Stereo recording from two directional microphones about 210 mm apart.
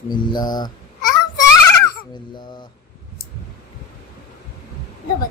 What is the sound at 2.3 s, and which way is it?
Speech, 20° left (ahead or behind).